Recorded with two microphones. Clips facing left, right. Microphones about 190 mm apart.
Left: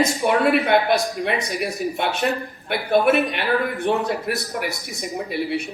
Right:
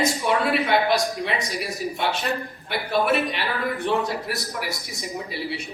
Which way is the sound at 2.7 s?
55° left (ahead or behind).